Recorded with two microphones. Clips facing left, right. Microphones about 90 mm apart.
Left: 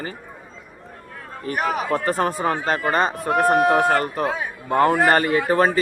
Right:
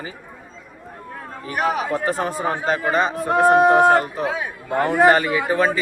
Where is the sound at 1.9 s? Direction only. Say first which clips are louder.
Left 1 dB; 50° left (ahead or behind).